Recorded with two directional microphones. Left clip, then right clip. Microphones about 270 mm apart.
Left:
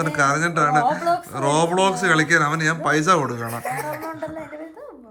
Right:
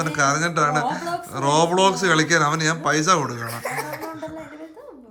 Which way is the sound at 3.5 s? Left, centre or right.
Centre.